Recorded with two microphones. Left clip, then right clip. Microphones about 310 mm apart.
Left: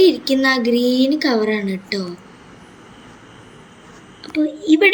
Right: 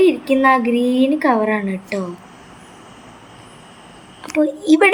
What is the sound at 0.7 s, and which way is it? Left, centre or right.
A woman's voice, centre.